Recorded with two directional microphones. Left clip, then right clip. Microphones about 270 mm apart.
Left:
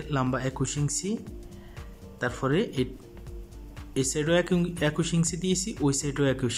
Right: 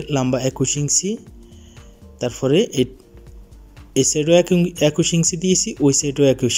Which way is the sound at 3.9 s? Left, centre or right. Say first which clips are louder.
Right 10 dB; centre.